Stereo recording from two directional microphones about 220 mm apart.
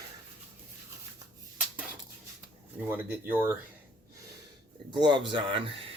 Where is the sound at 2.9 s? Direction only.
10° right (ahead or behind).